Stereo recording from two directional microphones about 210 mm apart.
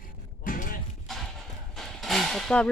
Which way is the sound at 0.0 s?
40° left (ahead or behind).